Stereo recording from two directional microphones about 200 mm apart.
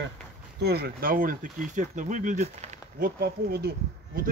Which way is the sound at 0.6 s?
55° right (ahead or behind).